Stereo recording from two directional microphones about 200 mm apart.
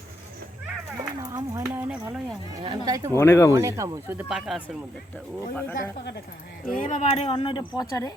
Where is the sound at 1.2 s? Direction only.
15° right (ahead or behind).